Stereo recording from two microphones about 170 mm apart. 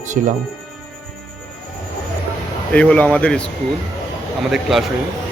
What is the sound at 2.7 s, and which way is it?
Speech, 10° left (ahead or behind).